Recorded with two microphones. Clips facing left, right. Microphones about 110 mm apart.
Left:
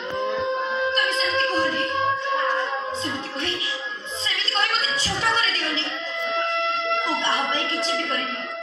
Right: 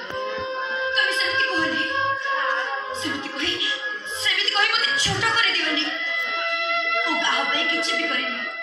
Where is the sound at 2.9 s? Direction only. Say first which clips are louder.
Even; 30° left (ahead or behind).